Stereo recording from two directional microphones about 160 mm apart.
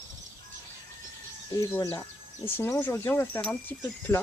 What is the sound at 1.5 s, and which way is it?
Speech, 20° left (ahead or behind).